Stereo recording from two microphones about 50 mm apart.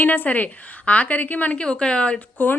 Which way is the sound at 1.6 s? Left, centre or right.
Centre.